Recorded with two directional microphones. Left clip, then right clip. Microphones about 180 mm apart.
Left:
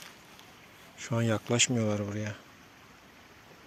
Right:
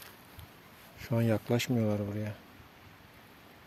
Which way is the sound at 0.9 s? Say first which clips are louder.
Even; 20° right (ahead or behind).